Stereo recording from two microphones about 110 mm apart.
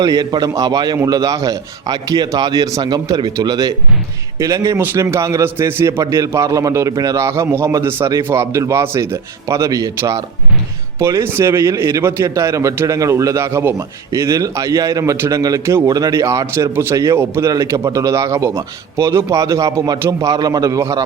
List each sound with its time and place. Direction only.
0.0 s a man's voice: 35° right (ahead or behind)